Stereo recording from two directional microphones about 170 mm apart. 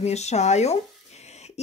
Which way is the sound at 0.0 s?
40° left (ahead or behind).